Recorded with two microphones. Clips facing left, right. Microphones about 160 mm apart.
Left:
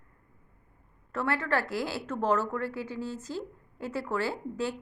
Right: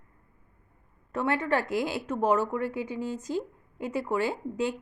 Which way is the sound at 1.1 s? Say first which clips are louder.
Right 2 dB; 15° right (ahead or behind).